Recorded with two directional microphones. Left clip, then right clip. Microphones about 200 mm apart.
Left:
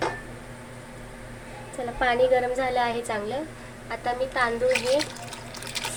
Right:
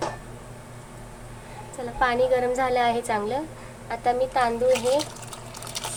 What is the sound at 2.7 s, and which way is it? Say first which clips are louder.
A woman's voice: right 3 dB; 25° right (ahead or behind).